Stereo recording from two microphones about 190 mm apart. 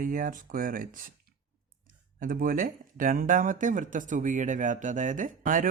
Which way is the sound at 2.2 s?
50° right (ahead or behind).